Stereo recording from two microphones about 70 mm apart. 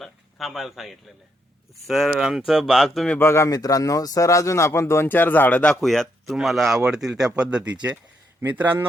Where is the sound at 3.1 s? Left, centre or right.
Left.